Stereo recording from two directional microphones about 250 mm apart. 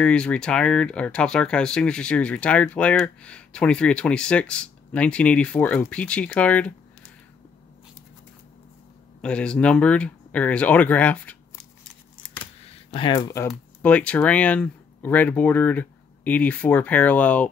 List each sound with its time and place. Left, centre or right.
0.0 s speech: centre
9.2 s speech: centre
12.9 s speech: centre